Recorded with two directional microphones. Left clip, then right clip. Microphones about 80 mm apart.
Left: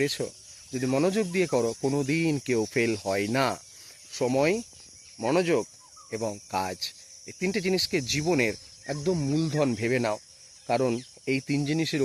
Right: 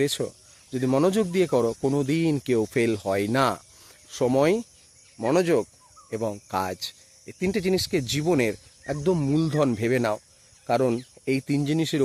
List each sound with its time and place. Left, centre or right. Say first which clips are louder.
0.0 s cricket: right 3 dB; centre
0.8 s speech: right 3 dB; right
1.5 s speech: right 3 dB; centre
4.1 s speech: right 3 dB; right
5.3 s speech: right 3 dB; right
6.1 s speech: right 3 dB; centre
6.5 s speech: right 2 dB; right
9.0 s speech: right 4 dB; right
9.6 s speech: right 3 dB; centre